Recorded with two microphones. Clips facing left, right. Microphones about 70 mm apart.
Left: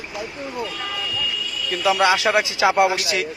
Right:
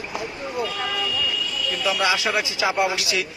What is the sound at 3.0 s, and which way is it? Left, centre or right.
Speech, left.